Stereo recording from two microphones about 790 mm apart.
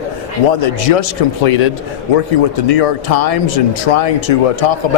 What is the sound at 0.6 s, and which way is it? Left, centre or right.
Speech, left.